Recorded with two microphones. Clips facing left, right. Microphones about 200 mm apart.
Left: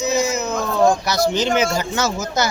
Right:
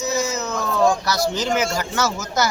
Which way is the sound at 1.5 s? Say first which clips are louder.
Left 3 dB; 25° left (ahead or behind).